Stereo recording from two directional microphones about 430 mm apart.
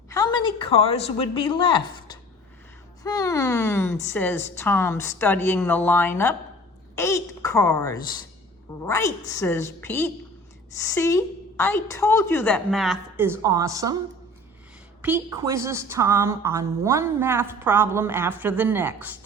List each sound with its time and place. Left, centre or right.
0.1 s a woman's voice: centre
15.0 s a woman's voice: centre